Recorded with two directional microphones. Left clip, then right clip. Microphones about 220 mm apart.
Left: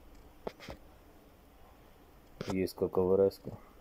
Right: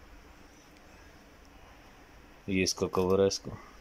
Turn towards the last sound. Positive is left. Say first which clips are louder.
# right 1 dB
turn(degrees=-10)  # may be behind; listen again after turning